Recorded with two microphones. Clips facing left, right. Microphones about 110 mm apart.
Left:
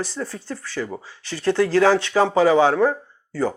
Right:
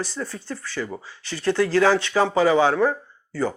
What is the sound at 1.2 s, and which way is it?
Speech, 50° left (ahead or behind).